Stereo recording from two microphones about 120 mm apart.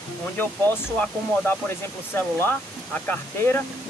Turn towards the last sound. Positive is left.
turn(degrees=15)  # may be behind; listen again after turning